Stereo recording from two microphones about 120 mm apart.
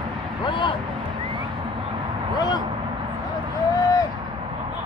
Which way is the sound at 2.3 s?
35° left (ahead or behind).